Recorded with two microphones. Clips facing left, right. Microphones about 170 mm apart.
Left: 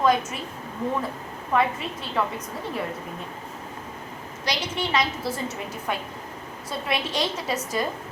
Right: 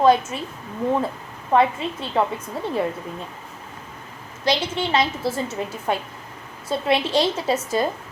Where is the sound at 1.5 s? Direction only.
30° right (ahead or behind).